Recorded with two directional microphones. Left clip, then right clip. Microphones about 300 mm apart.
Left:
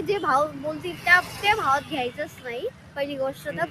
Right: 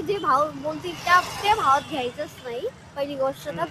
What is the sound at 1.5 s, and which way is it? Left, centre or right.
Speech, centre.